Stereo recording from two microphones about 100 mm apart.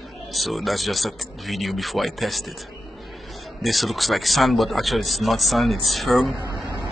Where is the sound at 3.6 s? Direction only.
Centre (ahead or behind).